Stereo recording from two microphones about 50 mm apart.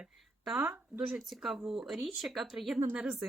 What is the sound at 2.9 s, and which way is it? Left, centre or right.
Speech, right.